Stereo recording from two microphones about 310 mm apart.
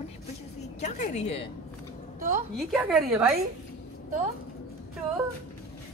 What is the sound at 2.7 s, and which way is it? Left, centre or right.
Speech, centre.